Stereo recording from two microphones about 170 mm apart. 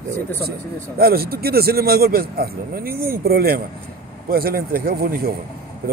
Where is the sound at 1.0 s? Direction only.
65° right (ahead or behind).